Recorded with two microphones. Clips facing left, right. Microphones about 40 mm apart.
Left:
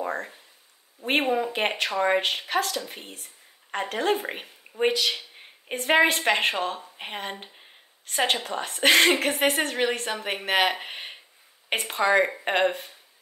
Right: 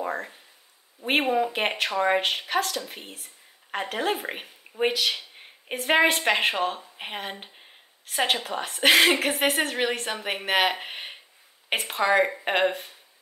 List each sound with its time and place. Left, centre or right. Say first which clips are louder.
0.0 s a woman's voice: even; centre